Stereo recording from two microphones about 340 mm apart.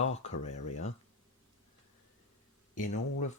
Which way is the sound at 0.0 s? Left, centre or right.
Centre.